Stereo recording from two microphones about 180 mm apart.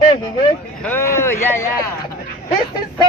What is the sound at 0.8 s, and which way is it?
Speech, 10° left (ahead or behind).